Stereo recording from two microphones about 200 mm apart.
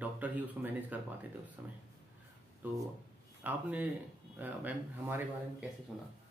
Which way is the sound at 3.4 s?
10° right (ahead or behind).